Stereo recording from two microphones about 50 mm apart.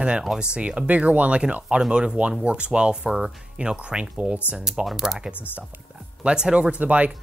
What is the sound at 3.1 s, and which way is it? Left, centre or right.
Speech, centre.